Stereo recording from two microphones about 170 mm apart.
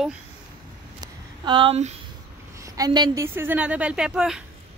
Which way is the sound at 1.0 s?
25° right (ahead or behind).